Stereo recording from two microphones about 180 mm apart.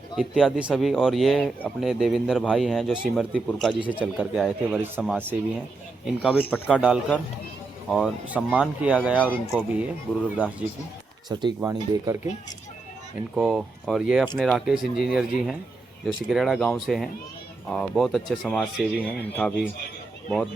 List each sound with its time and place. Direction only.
0.2 s speech: centre (ahead or behind)
4.8 s speech: 10° right (ahead or behind)
6.5 s speech: 10° left (ahead or behind)
7.9 s speech: centre (ahead or behind)
9.1 s speech: 5° left (ahead or behind)
9.6 s speech: 10° right (ahead or behind)
11.3 s speech: 25° right (ahead or behind)
13.3 s speech: 5° right (ahead or behind)